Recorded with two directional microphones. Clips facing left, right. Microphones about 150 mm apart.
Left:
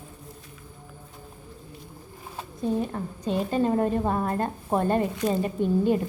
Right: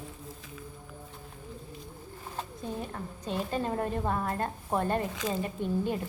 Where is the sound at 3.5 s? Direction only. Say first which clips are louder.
Left 9 dB; 15° left (ahead or behind).